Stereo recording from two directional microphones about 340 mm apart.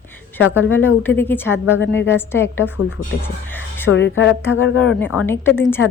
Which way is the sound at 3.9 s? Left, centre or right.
Left.